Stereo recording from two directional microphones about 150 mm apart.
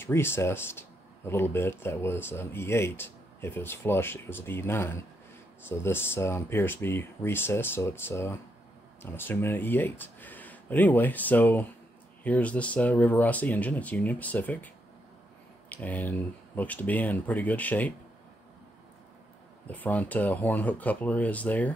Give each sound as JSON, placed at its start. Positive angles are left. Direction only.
{"t": 0.0, "sound": "speech", "side_deg": 15}
{"t": 15.7, "sound": "speech", "side_deg": 10}
{"t": 19.7, "sound": "speech", "side_deg": 10}